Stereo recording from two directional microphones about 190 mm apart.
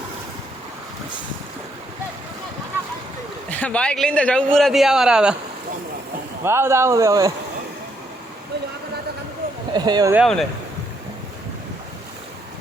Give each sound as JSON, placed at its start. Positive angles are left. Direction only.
{"t": 3.5, "sound": "a man's voice", "side_deg": 5}
{"t": 6.4, "sound": "speech", "side_deg": -15}
{"t": 9.7, "sound": "speech", "side_deg": -20}
{"t": 10.2, "sound": "a man's voice", "side_deg": 0}